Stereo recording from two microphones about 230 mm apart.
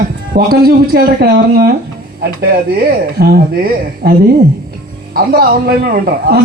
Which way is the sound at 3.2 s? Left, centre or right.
Right.